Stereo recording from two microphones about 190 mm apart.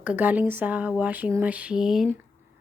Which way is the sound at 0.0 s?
10° right (ahead or behind).